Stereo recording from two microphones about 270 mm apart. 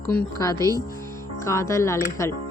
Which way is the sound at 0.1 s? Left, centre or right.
Centre.